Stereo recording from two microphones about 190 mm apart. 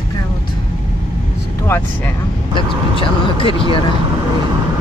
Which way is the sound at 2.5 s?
25° left (ahead or behind).